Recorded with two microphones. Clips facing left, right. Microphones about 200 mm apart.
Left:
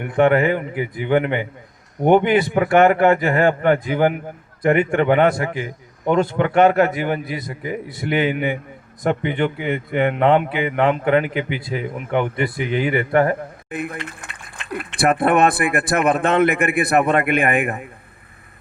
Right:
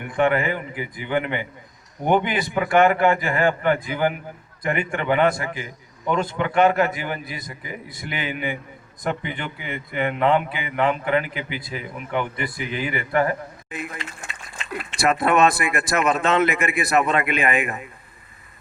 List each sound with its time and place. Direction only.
0.1 s a man's voice: 60° left (ahead or behind)